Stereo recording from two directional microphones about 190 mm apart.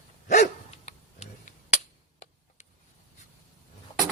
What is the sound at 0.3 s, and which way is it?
Dog, 40° left (ahead or behind).